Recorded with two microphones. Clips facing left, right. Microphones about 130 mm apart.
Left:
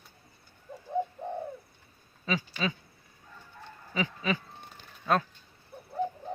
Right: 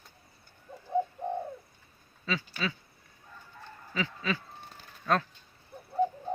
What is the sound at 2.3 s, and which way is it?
Speech, 20° left (ahead or behind).